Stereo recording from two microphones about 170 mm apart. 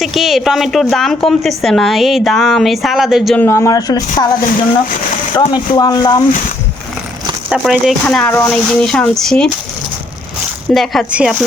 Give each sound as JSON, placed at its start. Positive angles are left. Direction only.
{"t": 0.0, "sound": "a woman's voice", "side_deg": 0}
{"t": 3.3, "sound": "speech", "side_deg": 15}
{"t": 5.4, "sound": "speech", "side_deg": 25}
{"t": 7.5, "sound": "a woman's voice", "side_deg": 0}
{"t": 10.8, "sound": "a woman's voice", "side_deg": -5}